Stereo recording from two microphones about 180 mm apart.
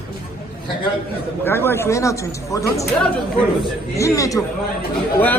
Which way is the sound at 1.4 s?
10° left (ahead or behind).